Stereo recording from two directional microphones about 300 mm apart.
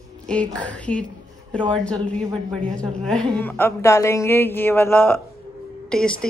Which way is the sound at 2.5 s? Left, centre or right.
Centre.